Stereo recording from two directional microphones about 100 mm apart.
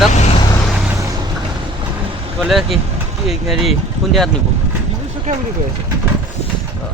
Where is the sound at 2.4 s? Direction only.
Centre (ahead or behind).